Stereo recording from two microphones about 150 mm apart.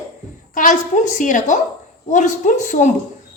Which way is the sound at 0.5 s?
55° left (ahead or behind).